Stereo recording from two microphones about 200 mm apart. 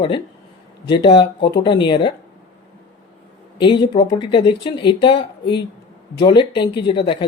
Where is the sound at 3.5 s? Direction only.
20° left (ahead or behind).